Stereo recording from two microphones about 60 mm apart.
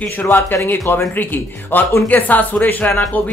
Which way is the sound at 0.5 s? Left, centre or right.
Left.